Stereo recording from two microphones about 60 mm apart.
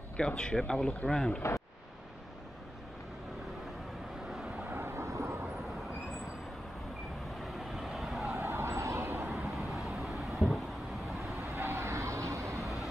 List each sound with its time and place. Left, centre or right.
0.2 s speech: centre
4.3 s vehicle: centre
4.6 s vehicle: right
7.3 s vehicle: centre
8.4 s vehicle: right
9.5 s vehicle: centre
11.3 s vehicle: right